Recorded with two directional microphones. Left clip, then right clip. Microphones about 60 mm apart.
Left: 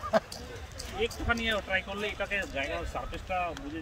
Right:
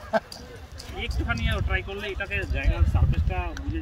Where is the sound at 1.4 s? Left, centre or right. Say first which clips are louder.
Even; left.